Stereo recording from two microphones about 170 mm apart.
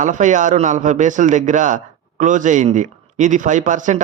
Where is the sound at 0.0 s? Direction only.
45° right (ahead or behind).